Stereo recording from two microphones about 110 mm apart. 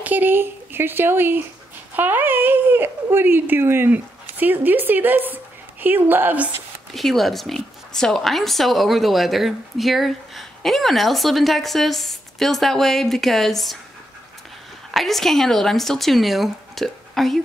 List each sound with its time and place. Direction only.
0.0 s speech: 15° right (ahead or behind)
6.9 s speech: centre (ahead or behind)
14.9 s speech: centre (ahead or behind)